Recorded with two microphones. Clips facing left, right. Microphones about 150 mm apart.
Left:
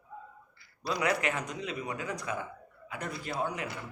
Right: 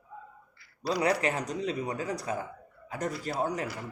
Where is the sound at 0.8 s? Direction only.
35° right (ahead or behind).